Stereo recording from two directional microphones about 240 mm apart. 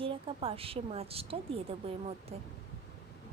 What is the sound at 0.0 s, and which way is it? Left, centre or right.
A woman's voice, right.